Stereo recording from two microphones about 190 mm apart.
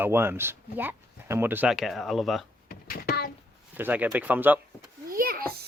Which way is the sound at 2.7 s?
50° left (ahead or behind).